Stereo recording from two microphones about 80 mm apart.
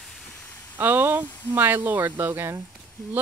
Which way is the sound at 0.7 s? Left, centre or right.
Right.